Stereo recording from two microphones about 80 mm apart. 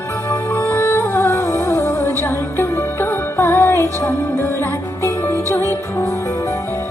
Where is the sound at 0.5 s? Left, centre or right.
Left.